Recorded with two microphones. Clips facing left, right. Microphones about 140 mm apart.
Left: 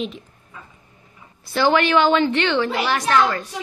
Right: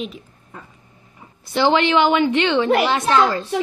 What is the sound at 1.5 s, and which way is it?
A woman's voice, 20° right (ahead or behind).